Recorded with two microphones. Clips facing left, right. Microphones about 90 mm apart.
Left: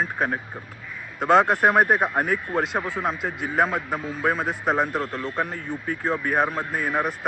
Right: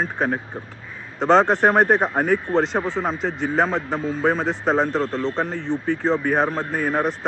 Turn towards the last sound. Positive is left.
turn(degrees=5)  # may be behind; listen again after turning